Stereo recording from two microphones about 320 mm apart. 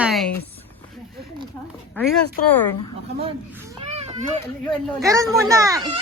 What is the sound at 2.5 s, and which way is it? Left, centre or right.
Speech, centre.